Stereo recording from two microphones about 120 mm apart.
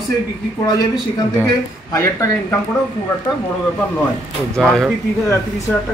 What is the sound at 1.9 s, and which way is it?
Speech, 25° left (ahead or behind).